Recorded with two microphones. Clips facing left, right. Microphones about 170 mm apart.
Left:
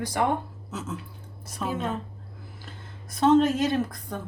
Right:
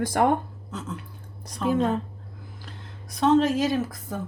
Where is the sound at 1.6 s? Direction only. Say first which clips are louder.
Right 6 dB; 5° left (ahead or behind).